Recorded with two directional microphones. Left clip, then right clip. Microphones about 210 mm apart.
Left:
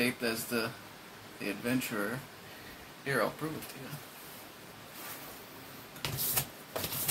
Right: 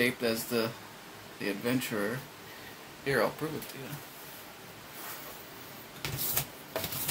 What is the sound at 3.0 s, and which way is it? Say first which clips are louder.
Speech: right 3 dB; 20° right (ahead or behind).